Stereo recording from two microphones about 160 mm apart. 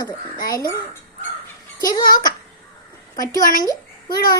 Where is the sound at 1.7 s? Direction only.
25° left (ahead or behind).